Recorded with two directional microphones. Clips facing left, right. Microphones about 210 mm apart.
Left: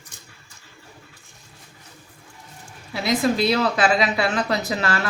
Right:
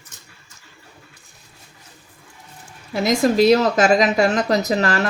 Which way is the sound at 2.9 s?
45° right (ahead or behind).